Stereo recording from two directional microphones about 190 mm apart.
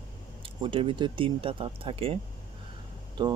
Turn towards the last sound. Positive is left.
turn(degrees=-25)  # may be behind; listen again after turning